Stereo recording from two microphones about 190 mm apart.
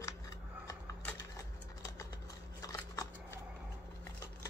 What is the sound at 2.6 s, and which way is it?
Scissors, 20° left (ahead or behind).